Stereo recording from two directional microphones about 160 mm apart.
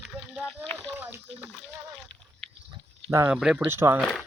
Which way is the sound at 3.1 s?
15° right (ahead or behind).